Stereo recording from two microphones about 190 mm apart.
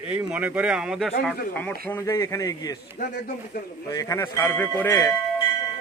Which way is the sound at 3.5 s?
60° left (ahead or behind).